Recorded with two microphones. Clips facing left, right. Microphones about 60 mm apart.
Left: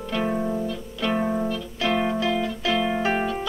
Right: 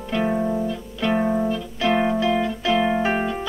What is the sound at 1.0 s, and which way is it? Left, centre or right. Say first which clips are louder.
Music: right 3 dB; centre.